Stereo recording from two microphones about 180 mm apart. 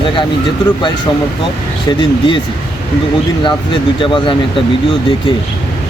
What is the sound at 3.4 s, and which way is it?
Speech, 30° left (ahead or behind).